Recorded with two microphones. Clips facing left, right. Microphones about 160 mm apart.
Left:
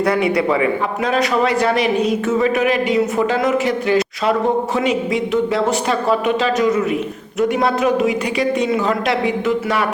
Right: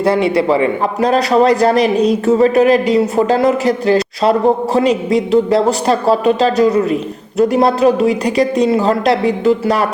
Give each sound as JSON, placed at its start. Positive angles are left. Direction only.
{"t": 0.0, "sound": "a man's voice", "side_deg": -30}